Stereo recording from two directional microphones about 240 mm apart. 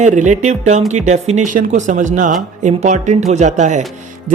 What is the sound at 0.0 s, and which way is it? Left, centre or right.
A woman's voice, right.